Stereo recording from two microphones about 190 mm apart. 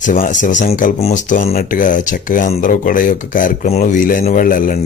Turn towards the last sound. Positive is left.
turn(degrees=45)  # may be behind; listen again after turning